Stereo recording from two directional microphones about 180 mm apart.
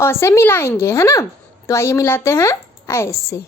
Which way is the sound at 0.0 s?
15° left (ahead or behind).